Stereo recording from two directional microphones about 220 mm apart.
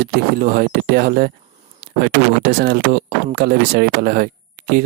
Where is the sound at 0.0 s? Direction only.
40° right (ahead or behind).